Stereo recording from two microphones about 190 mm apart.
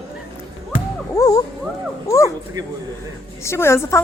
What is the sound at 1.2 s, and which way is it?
Speech, 20° left (ahead or behind).